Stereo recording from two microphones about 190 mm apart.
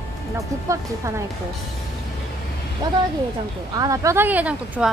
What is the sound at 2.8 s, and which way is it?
A woman's voice, 20° right (ahead or behind).